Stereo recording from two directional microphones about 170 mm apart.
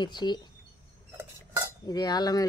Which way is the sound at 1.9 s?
25° left (ahead or behind).